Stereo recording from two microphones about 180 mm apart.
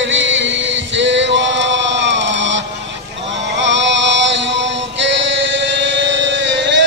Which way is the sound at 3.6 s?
90° right.